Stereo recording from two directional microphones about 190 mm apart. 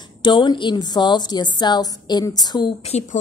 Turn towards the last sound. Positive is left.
turn(degrees=35)  # may be behind; listen again after turning